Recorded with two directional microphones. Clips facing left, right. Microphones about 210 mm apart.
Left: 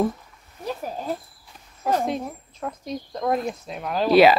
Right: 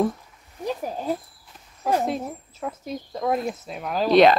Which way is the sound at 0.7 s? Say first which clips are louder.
Right 2 dB; 15° right (ahead or behind).